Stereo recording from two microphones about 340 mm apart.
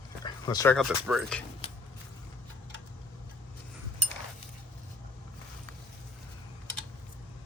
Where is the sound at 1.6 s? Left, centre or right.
Centre.